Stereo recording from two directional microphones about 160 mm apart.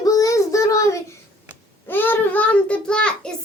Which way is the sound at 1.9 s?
10° left (ahead or behind).